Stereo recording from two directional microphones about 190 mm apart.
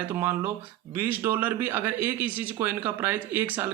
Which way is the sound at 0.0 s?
10° right (ahead or behind).